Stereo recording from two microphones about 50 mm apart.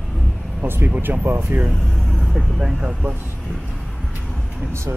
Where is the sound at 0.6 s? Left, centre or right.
Right.